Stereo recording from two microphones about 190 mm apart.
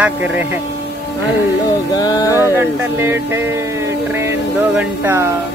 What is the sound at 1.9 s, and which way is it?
Speech, 20° left (ahead or behind).